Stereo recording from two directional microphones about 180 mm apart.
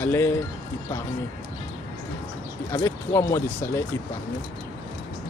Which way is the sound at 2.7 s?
15° left (ahead or behind).